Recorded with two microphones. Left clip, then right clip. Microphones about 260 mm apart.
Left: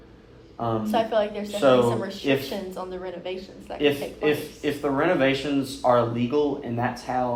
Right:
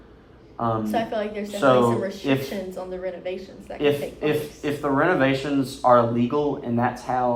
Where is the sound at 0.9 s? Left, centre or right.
Centre.